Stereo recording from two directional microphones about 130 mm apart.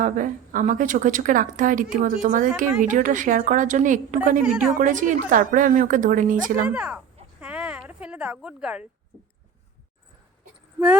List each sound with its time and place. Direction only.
0.0 s a woman's voice: 85° right
4.4 s speech: 10° right (ahead or behind)
4.8 s speech: 85° right
6.7 s speech: 10° right (ahead or behind)
7.3 s a sound: 10° right (ahead or behind)